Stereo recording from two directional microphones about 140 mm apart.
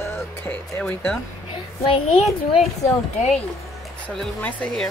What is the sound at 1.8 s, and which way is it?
Speech, 40° left (ahead or behind).